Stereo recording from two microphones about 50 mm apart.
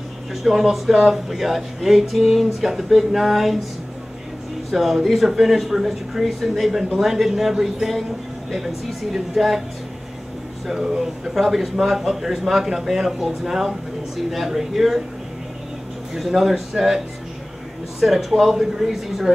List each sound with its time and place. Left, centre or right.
0.3 s a man's voice: centre
4.6 s a man's voice: centre
10.7 s a man's voice: centre
16.3 s a man's voice: centre
18.0 s a man's voice: centre